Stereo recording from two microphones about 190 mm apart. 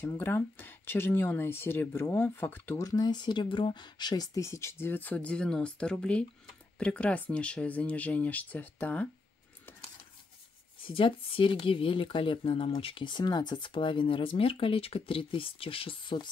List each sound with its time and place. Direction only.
0.0 s speech: 10° left (ahead or behind)
10.9 s speech: 30° left (ahead or behind)